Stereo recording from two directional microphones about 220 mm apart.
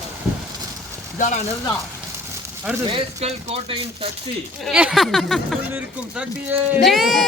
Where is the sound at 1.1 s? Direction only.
35° left (ahead or behind).